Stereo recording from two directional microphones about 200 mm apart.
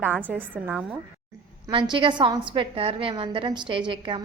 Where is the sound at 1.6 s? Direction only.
25° right (ahead or behind).